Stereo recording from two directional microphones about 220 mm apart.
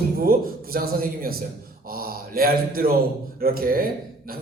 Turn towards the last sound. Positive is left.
turn(degrees=-40)  # may be behind; listen again after turning